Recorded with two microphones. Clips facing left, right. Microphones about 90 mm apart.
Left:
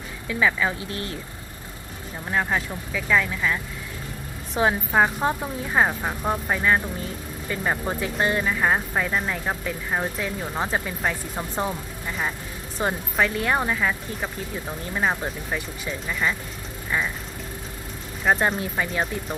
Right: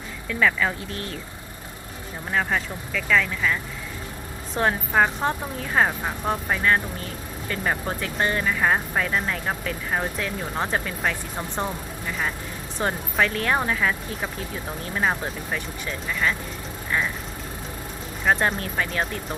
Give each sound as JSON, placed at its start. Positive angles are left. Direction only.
{"t": 0.3, "sound": "speech", "side_deg": 5}
{"t": 2.3, "sound": "speech", "side_deg": 5}
{"t": 12.8, "sound": "speech", "side_deg": 5}
{"t": 18.3, "sound": "speech", "side_deg": 0}